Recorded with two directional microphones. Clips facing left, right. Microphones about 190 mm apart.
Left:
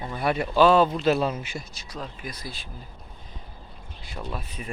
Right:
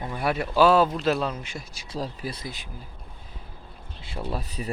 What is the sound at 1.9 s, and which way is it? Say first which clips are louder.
Speech: right 10 dB; 35° right (ahead or behind).